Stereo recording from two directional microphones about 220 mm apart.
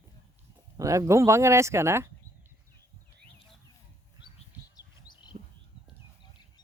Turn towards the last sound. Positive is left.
turn(degrees=20)  # may be behind; listen again after turning